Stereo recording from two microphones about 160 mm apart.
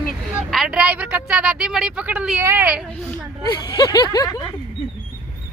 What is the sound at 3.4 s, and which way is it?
Speech, 25° left (ahead or behind).